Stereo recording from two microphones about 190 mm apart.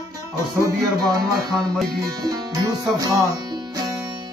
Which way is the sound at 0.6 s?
20° right (ahead or behind).